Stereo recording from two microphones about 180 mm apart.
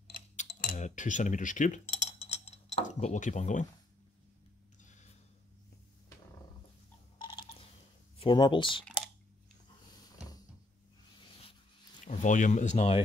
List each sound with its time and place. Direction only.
0.5 s cutlery: 50° left (ahead or behind)
7.2 s a sound: 25° left (ahead or behind)
8.2 s speech: 25° left (ahead or behind)
12.1 s speech: 45° left (ahead or behind)